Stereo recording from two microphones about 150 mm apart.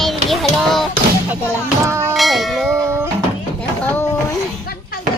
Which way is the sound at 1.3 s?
15° right (ahead or behind).